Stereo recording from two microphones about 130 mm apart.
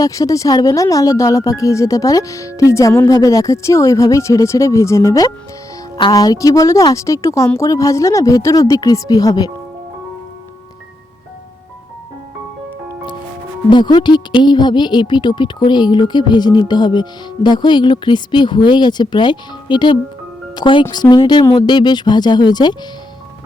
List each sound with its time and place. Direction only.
0.0 s a woman's voice: 25° left (ahead or behind)
13.7 s speech: 35° left (ahead or behind)